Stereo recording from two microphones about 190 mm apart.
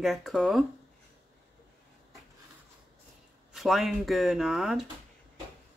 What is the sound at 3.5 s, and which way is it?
Speech, centre (ahead or behind).